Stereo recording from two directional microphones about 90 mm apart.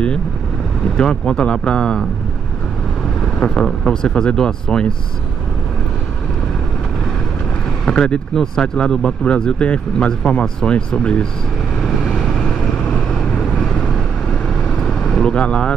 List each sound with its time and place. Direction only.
0.9 s speech: 10° left (ahead or behind)
3.3 s speech: 10° left (ahead or behind)
7.8 s speech: 10° left (ahead or behind)
11.8 s vehicle: 5° left (ahead or behind)